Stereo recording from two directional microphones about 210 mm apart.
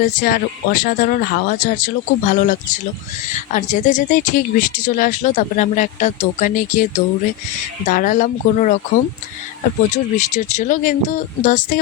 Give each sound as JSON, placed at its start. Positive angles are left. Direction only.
{"t": 0.0, "sound": "speech", "side_deg": 40}
{"t": 9.9, "sound": "speech", "side_deg": 35}